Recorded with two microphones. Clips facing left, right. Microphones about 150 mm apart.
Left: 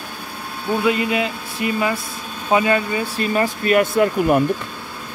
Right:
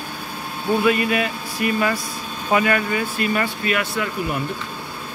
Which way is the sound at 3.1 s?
35° left (ahead or behind).